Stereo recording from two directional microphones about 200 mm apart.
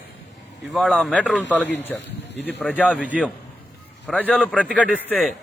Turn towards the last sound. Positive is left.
turn(degrees=0)  # may be behind; listen again after turning